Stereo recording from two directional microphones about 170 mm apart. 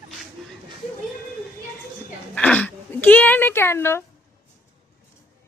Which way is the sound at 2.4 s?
5° left (ahead or behind).